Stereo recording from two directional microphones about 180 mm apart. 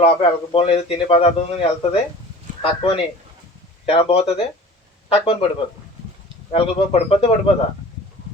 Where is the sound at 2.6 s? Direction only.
30° left (ahead or behind).